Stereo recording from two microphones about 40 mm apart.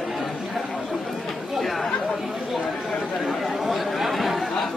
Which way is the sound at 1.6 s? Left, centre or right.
Centre.